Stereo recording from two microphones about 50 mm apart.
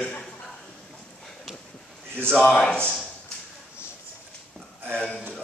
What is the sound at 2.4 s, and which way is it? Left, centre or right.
Speech, centre.